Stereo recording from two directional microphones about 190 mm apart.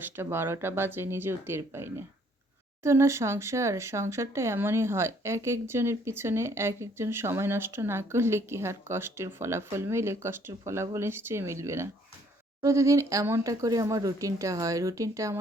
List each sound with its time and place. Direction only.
0.0 s speech: 10° right (ahead or behind)